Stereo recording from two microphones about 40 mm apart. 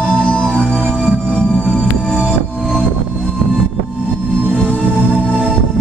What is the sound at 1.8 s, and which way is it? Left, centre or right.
Music, centre.